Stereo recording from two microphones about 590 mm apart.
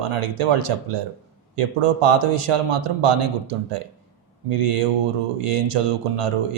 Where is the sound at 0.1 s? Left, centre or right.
Right.